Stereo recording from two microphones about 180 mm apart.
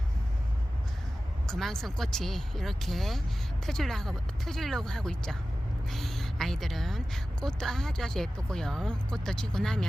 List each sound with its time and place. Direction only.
1.5 s a woman's voice: centre (ahead or behind)